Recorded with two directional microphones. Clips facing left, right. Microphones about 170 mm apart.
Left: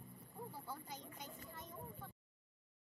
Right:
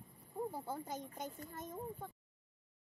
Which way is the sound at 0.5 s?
45° right (ahead or behind).